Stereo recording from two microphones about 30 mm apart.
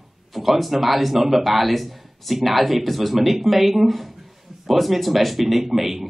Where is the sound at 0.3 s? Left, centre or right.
Centre.